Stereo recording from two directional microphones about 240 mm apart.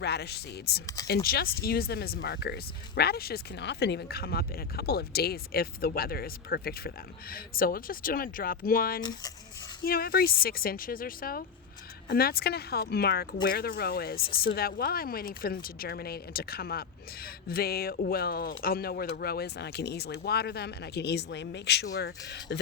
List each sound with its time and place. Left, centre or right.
0.0 s speech: left